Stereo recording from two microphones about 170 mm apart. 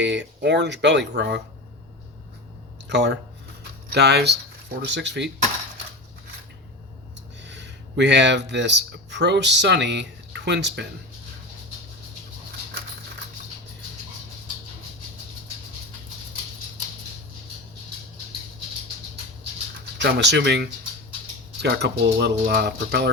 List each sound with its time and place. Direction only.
0.0 s speech: 90° right
2.9 s speech: 90° right
3.6 s a sound: 75° right (ahead or behind)
4.8 s speech: 90° right
7.4 s speech: 90° right
20.0 s speech: 90° right